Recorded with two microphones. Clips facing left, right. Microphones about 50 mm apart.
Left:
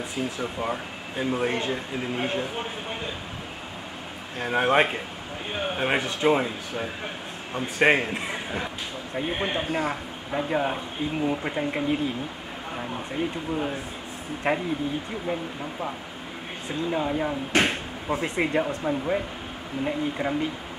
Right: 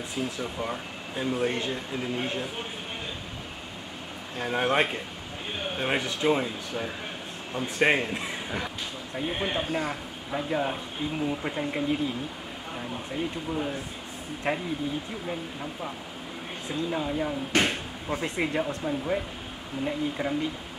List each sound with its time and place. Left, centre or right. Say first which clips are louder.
0.1 s a man's voice: even; centre
4.4 s a man's voice: left 4 dB; centre
16.9 s speech: left 4 dB; centre